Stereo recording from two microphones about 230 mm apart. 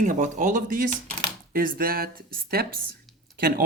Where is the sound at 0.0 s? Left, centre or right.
Right.